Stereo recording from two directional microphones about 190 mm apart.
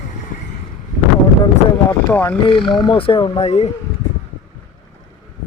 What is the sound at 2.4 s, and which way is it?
Speech, 25° left (ahead or behind).